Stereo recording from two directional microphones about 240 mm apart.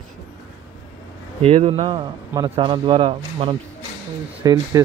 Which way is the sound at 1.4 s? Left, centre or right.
Right.